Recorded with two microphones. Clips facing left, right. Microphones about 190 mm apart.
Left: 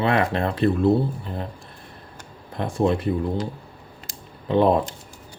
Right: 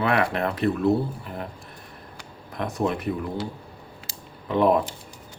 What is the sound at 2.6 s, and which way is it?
Speech, 30° left (ahead or behind).